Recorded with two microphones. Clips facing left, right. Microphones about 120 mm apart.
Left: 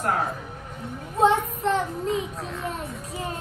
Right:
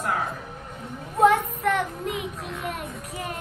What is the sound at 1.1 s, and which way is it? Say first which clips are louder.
Child singing: right 1 dB; 25° left (ahead or behind).